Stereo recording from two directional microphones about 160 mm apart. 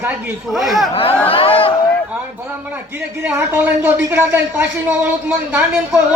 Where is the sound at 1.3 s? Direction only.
35° left (ahead or behind).